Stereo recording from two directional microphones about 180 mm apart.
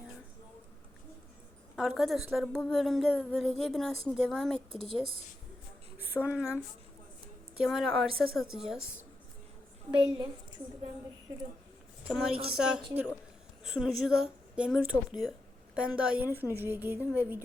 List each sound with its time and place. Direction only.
1.7 s a woman's voice: centre (ahead or behind)
4.5 s speech: 30° right (ahead or behind)
6.1 s speech: 10° left (ahead or behind)
7.6 s a woman's voice: centre (ahead or behind)
9.9 s a woman's voice: 25° right (ahead or behind)
12.0 s a woman's voice: 5° right (ahead or behind)